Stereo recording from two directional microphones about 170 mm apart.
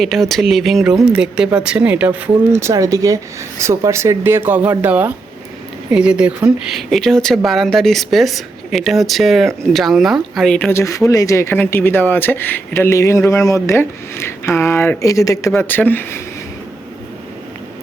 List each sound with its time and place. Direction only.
0.0 s speech: centre (ahead or behind)